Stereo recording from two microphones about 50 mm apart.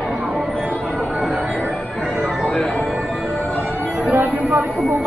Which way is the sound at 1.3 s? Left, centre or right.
Right.